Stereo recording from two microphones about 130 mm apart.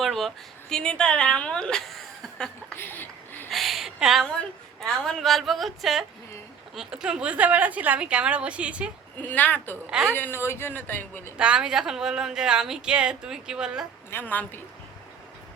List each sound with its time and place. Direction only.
0.0 s a woman's voice: centre (ahead or behind)
2.7 s speech: 15° left (ahead or behind)
3.5 s a sound: centre (ahead or behind)
5.0 s a woman's voice: 5° left (ahead or behind)
9.2 s speech: 15° left (ahead or behind)
9.9 s a woman's voice: 5° right (ahead or behind)
10.2 s speech: 15° left (ahead or behind)
11.3 s a woman's voice: 10° right (ahead or behind)
14.1 s speech: 15° left (ahead or behind)